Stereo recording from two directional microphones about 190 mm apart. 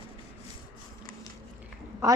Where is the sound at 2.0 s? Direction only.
15° right (ahead or behind).